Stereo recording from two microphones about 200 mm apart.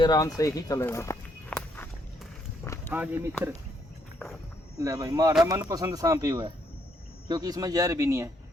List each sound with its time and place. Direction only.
0.0 s speech: 20° left (ahead or behind)
2.9 s speech: 10° right (ahead or behind)
4.8 s speech: 15° right (ahead or behind)